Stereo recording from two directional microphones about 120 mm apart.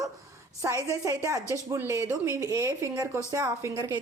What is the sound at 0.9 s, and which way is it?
A woman's voice, 25° right (ahead or behind).